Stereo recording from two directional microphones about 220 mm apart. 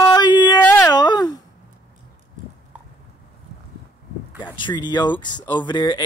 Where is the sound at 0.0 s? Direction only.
20° left (ahead or behind).